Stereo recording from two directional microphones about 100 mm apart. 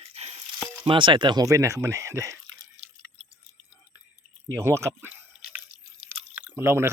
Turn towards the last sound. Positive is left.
turn(degrees=-25)  # may be behind; listen again after turning